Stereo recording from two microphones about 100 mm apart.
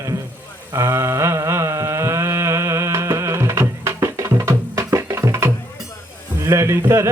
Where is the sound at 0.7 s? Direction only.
30° right (ahead or behind).